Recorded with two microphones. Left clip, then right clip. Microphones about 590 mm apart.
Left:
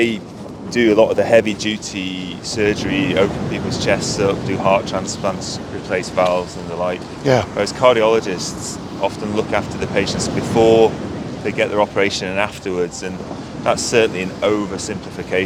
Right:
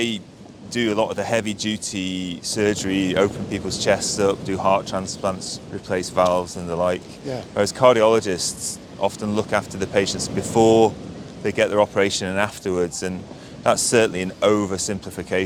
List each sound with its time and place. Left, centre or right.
0.7 s speech: right
2.0 s speech: right
9.0 s speech: right
11.4 s speech: right
15.3 s speech: right